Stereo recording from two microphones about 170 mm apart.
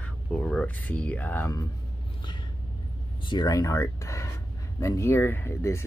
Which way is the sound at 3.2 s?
25° left (ahead or behind).